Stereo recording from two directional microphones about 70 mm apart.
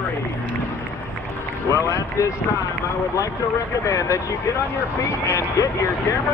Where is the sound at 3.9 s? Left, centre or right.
Left.